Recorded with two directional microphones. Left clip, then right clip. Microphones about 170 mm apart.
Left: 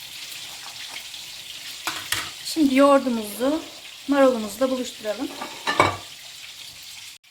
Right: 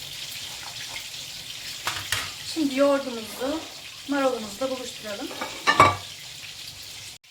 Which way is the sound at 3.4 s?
70° left (ahead or behind).